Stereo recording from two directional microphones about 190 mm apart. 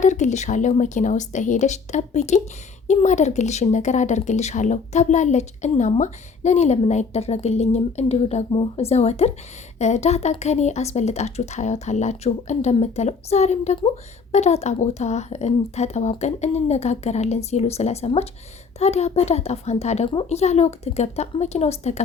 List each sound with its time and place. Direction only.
0.0 s a woman's voice: 40° left (ahead or behind)